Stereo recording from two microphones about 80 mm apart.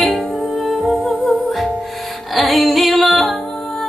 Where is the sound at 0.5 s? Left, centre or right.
Centre.